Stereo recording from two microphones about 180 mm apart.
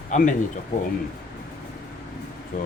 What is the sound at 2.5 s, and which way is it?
Speech, 45° left (ahead or behind).